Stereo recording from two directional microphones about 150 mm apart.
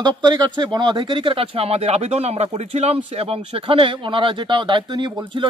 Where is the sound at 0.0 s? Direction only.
30° right (ahead or behind).